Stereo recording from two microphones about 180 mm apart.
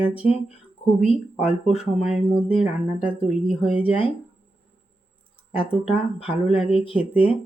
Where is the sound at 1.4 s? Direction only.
35° left (ahead or behind).